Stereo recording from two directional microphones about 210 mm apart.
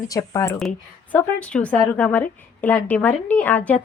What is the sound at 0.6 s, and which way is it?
A woman's voice, 5° left (ahead or behind).